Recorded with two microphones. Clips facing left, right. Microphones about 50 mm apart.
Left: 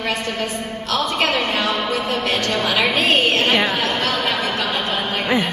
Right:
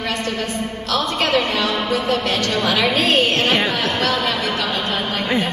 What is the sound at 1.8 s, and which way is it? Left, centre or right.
Music, centre.